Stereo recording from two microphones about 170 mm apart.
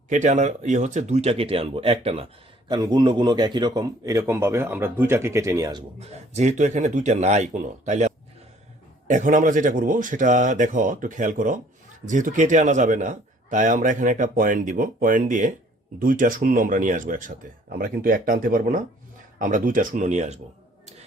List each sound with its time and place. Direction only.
0.1 s a man's voice: 45° right (ahead or behind); by 5.8 s 20° right (ahead or behind)
6.0 s a man's voice: 40° right (ahead or behind)